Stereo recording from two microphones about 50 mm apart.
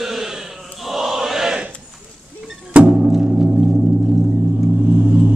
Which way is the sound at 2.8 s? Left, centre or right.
Right.